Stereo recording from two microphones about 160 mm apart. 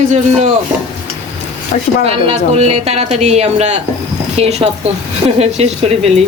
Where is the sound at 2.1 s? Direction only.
40° right (ahead or behind).